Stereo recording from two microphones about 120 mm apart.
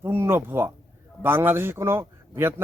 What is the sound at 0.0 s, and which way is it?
A man's voice, 20° right (ahead or behind).